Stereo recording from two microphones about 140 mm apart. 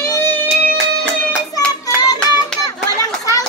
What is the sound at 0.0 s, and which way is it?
Music, 20° left (ahead or behind).